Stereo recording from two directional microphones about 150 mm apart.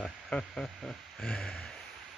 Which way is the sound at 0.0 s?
5° left (ahead or behind).